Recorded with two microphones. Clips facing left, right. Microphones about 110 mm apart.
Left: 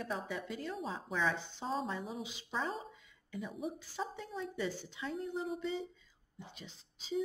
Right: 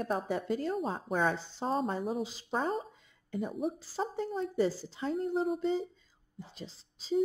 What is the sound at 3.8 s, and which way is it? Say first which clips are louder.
A woman's voice: right 7 dB; 35° right (ahead or behind).